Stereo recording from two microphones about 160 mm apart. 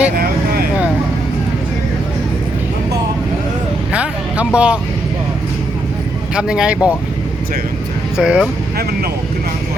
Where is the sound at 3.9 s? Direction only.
10° right (ahead or behind).